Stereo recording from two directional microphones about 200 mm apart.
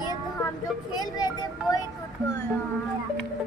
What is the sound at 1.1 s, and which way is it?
Speech, 20° left (ahead or behind).